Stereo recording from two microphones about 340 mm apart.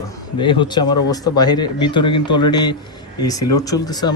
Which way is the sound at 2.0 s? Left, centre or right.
Left.